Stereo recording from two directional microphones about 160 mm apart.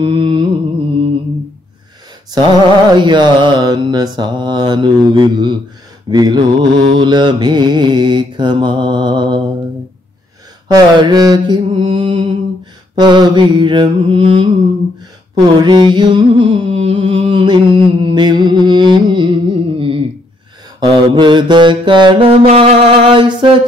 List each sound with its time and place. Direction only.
0.0 s music: 30° right (ahead or behind)
2.3 s mantra: 30° right (ahead or behind)
10.7 s mantra: 25° right (ahead or behind)
15.3 s a sound: 30° right (ahead or behind)
20.8 s mantra: 30° right (ahead or behind)